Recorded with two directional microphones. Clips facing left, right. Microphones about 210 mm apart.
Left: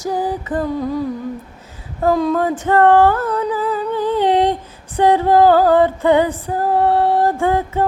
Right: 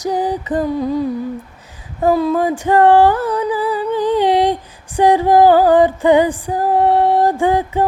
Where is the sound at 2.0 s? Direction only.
10° right (ahead or behind).